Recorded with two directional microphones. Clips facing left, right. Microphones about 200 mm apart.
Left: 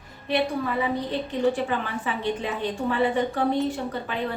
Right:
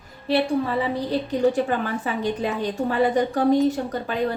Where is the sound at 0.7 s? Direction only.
35° right (ahead or behind).